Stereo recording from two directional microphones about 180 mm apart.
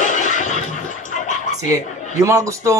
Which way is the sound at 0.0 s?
45° left (ahead or behind).